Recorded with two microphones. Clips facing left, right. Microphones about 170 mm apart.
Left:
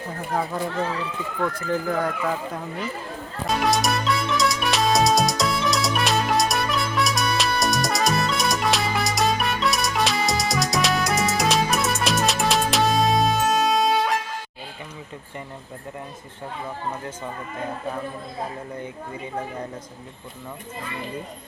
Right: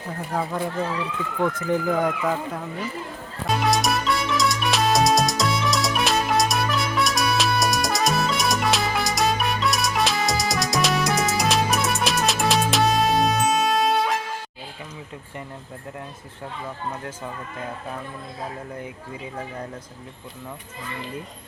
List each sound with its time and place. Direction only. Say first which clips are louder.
1.4 s speech: right 2 dB; 20° right (ahead or behind)
3.4 s music: even; centre (ahead or behind)